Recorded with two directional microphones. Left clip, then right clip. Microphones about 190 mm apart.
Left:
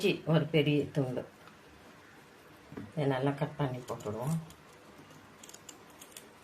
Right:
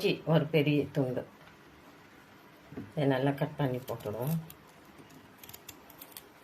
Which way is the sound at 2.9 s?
20° right (ahead or behind).